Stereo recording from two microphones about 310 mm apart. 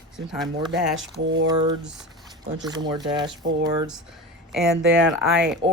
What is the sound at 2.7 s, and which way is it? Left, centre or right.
Speech, centre.